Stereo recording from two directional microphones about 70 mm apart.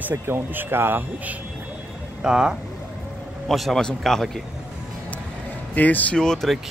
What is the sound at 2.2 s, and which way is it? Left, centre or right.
Speech, centre.